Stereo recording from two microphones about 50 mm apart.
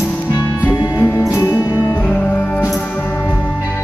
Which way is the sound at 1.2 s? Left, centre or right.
Left.